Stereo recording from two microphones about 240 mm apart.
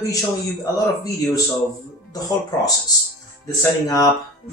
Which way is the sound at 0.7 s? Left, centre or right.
Centre.